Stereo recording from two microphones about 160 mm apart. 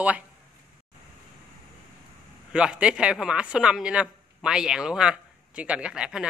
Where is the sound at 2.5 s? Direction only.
5° right (ahead or behind).